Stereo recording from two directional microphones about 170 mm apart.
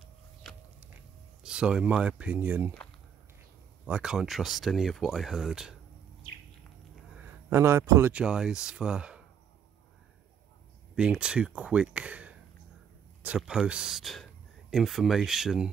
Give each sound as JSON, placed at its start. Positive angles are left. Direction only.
{"t": 1.4, "sound": "speech", "side_deg": -5}
{"t": 3.8, "sound": "speech", "side_deg": -5}
{"t": 7.2, "sound": "a sound", "side_deg": -15}
{"t": 8.1, "sound": "speech", "side_deg": -5}
{"t": 11.0, "sound": "speech", "side_deg": -5}